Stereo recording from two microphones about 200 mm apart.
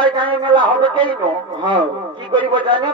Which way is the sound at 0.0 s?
25° right (ahead or behind).